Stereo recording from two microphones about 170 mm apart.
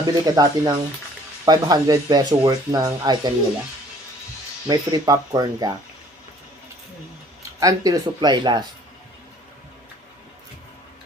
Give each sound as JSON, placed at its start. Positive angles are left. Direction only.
{"t": 0.0, "sound": "speech", "side_deg": -25}
{"t": 4.7, "sound": "speech", "side_deg": -25}
{"t": 7.6, "sound": "speech", "side_deg": -20}